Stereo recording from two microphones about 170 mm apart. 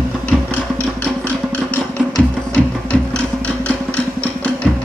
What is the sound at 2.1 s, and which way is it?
Music, 5° left (ahead or behind).